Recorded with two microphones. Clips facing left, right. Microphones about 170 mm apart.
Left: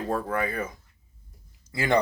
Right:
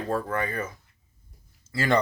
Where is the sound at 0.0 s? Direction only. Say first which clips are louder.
Even; 10° left (ahead or behind).